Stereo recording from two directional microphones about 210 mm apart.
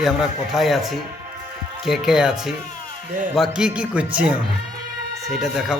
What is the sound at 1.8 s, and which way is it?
A man's voice, centre (ahead or behind).